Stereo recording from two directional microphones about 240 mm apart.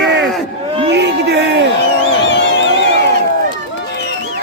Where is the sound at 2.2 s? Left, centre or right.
Left.